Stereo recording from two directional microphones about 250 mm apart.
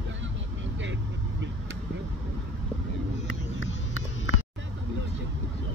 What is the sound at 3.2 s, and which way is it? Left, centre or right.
Vehicle, left.